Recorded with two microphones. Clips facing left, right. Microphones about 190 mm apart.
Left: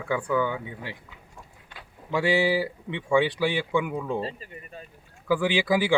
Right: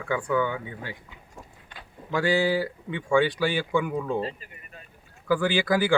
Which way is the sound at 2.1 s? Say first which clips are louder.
Even; 5° left (ahead or behind).